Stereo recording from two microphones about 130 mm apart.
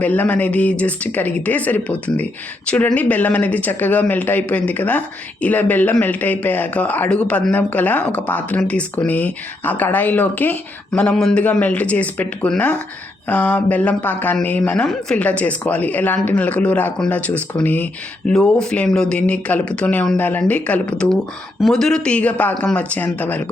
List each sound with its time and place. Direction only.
0.0 s speech: 10° left (ahead or behind)
21.6 s speech: 5° left (ahead or behind)